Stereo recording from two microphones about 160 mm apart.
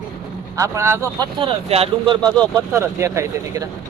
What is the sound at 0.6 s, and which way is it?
Speech, 20° right (ahead or behind).